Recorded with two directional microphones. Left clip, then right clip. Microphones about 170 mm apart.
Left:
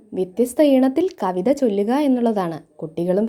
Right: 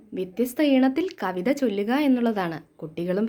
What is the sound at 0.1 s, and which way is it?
A woman's voice, 30° left (ahead or behind).